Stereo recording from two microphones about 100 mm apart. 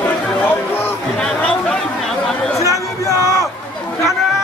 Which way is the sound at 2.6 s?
30° left (ahead or behind).